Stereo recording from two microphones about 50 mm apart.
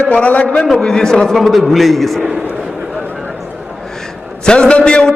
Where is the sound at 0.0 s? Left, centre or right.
Left.